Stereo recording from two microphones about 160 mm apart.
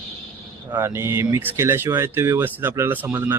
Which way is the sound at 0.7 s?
15° right (ahead or behind).